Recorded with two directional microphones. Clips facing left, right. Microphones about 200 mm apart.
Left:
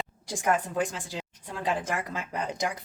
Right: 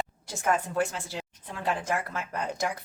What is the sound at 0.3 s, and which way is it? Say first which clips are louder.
Speech: left 1 dB; 15° left (ahead or behind).